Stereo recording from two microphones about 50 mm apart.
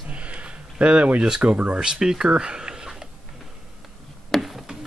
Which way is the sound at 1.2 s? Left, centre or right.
Centre.